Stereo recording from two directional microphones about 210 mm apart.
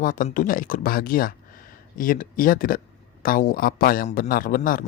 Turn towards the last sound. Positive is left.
turn(degrees=40)  # may be behind; listen again after turning